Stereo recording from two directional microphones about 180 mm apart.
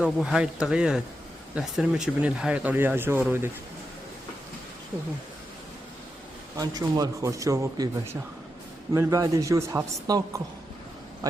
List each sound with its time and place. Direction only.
0.0 s speech: centre (ahead or behind)
6.6 s speech: 20° right (ahead or behind)